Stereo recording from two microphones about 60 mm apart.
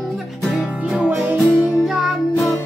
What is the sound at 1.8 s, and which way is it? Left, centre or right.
Music, centre.